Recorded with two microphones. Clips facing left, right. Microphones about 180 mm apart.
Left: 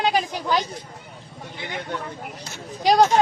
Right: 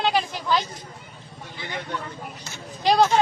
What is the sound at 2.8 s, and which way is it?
Speech, 45° left (ahead or behind).